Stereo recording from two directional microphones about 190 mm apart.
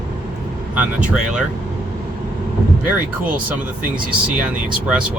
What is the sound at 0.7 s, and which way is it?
Speech, 5° right (ahead or behind).